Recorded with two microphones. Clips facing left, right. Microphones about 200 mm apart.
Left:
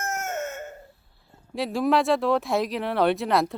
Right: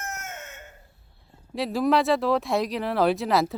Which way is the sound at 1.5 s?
Centre (ahead or behind).